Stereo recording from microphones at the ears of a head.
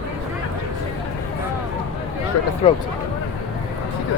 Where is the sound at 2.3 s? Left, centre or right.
Left.